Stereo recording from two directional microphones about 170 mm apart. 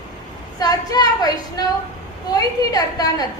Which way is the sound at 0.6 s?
20° left (ahead or behind).